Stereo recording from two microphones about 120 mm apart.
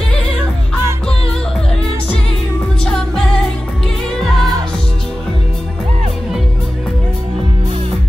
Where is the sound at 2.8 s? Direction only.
5° left (ahead or behind).